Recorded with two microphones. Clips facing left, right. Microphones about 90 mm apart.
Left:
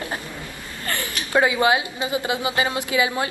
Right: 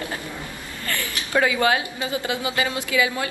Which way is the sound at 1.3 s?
20° left (ahead or behind).